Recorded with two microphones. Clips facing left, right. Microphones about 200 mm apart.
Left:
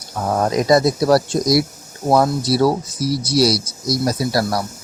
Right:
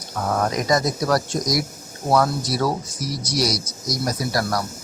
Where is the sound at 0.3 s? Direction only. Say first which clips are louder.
Left 5 dB; 30° left (ahead or behind).